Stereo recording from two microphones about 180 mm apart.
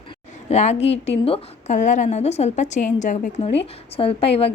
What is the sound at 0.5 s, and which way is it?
A woman's voice, 35° left (ahead or behind).